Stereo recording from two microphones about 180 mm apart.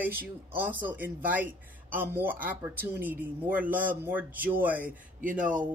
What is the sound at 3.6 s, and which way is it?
Speech, 50° right (ahead or behind).